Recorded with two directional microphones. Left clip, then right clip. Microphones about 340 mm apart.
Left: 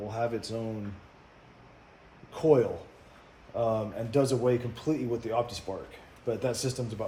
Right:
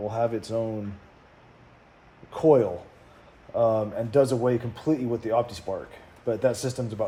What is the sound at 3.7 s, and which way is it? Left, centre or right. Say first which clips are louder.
Speech: right 6 dB; right.